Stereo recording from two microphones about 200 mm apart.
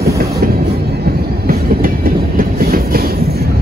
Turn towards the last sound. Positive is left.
turn(degrees=-50)  # may be behind; listen again after turning